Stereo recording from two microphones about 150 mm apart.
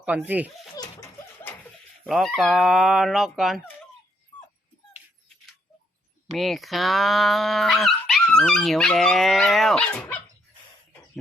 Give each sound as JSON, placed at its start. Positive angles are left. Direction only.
{"t": 0.0, "sound": "speech", "side_deg": -10}
{"t": 0.8, "sound": "a sound", "side_deg": 25}
{"t": 2.0, "sound": "speech", "side_deg": 0}
{"t": 6.3, "sound": "speech", "side_deg": 0}